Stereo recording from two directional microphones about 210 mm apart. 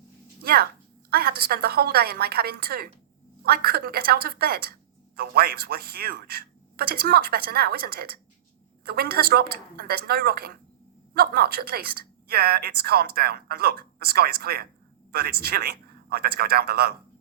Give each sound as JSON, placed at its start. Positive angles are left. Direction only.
{"t": 0.4, "sound": "a woman's voice", "side_deg": -45}